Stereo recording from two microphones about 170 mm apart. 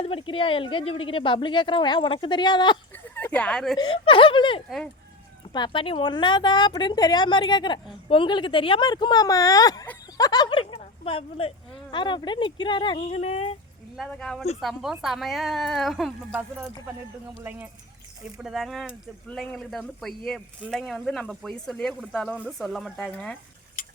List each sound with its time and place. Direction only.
0.0 s speech: 30° left (ahead or behind)
2.9 s a sound: 10° left (ahead or behind)
3.8 s speech: 30° left (ahead or behind)
13.0 s speech: 40° left (ahead or behind)
13.9 s speech: centre (ahead or behind)
18.3 s speech: centre (ahead or behind)